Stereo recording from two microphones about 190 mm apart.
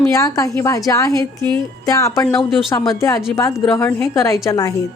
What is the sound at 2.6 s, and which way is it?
A woman's voice, 20° left (ahead or behind).